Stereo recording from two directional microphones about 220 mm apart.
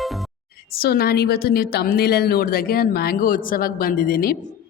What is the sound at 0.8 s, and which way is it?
A woman's voice, 45° left (ahead or behind).